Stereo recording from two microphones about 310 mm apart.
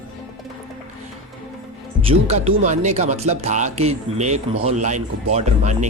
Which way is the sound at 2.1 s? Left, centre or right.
Centre.